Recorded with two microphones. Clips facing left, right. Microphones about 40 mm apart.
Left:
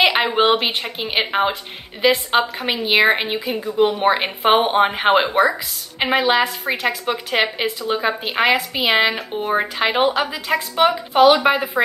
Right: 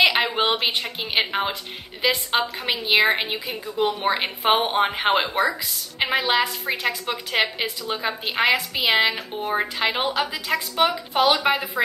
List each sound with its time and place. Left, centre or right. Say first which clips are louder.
0.0 s a woman's voice: left 3 dB; centre
0.6 s a woman's voice: left 2 dB; centre; by 7.5 s left
7.9 s a woman's voice: left 6 dB; centre
11.5 s speech: left 4 dB; left